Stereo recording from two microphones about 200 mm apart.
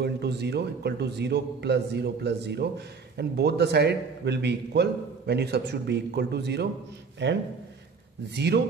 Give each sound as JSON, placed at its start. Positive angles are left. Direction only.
{"t": 0.0, "sound": "a man's voice", "side_deg": -55}